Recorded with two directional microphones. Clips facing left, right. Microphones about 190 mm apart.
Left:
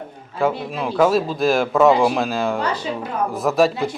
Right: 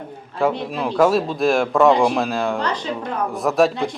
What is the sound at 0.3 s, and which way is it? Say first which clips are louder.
Speech: even; centre (ahead or behind).